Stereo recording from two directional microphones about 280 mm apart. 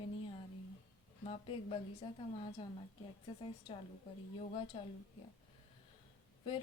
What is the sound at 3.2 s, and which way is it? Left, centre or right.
Speech, centre.